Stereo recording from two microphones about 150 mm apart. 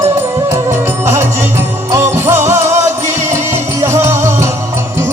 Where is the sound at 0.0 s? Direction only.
15° right (ahead or behind).